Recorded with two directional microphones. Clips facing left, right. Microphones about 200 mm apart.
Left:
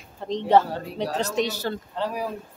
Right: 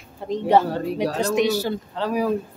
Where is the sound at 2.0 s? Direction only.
90° right.